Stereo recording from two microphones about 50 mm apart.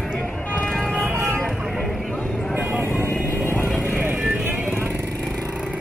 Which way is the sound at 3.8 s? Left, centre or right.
Right.